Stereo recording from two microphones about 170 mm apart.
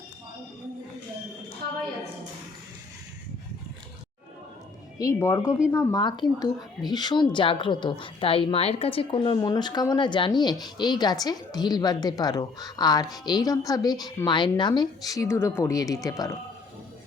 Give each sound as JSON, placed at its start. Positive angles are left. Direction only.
{"t": 4.9, "sound": "speech", "side_deg": 20}